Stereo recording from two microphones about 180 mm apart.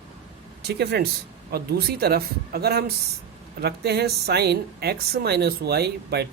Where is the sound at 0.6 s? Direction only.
65° right (ahead or behind).